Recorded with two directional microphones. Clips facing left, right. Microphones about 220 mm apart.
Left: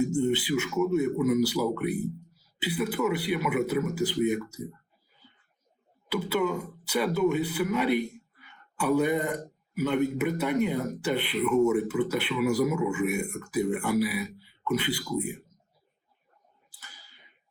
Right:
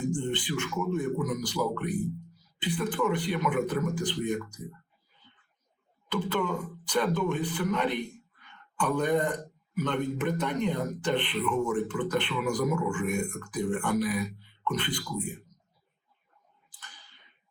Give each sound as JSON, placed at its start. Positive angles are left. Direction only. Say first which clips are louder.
{"t": 0.0, "sound": "a man's voice", "louder": "left 5 dB", "side_deg": 10}
{"t": 6.1, "sound": "a man's voice", "louder": "left 2 dB", "side_deg": 10}
{"t": 16.6, "sound": "a sound", "louder": "right 1 dB", "side_deg": 10}